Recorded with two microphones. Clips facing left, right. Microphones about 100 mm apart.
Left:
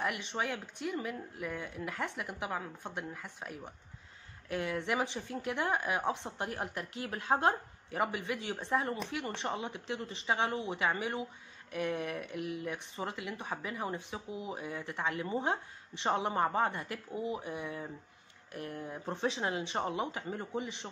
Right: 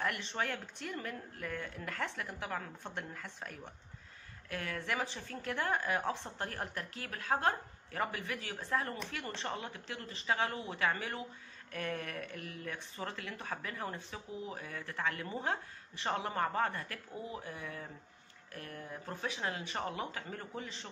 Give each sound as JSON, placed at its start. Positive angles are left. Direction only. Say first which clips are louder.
{"t": 0.0, "sound": "speech", "louder": "left 2 dB", "side_deg": 15}